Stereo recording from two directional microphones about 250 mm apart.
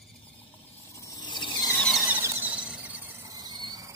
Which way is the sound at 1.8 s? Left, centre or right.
Centre.